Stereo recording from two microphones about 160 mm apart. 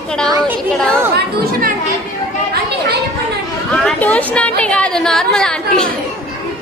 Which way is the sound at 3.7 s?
5° left (ahead or behind).